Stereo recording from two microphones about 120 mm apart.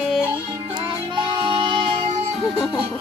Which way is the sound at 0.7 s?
40° right (ahead or behind).